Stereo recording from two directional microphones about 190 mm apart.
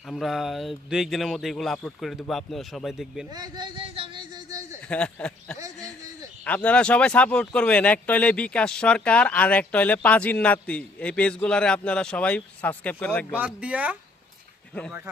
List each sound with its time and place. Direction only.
0.1 s speech: centre (ahead or behind)
3.2 s a sound: 20° right (ahead or behind)
4.9 s speech: 5° left (ahead or behind)
5.5 s a sound: 15° right (ahead or behind)
6.4 s speech: 5° left (ahead or behind)
13.3 s speech: 5° right (ahead or behind)
14.7 s speech: 5° left (ahead or behind)